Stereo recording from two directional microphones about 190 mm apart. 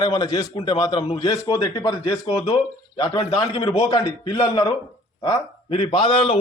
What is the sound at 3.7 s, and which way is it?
A man's voice, 20° left (ahead or behind).